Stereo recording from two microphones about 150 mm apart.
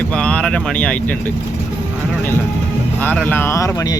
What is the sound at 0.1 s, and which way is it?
Speech, 5° left (ahead or behind).